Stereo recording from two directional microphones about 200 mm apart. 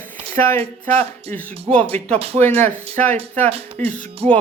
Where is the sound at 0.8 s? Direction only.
35° right (ahead or behind).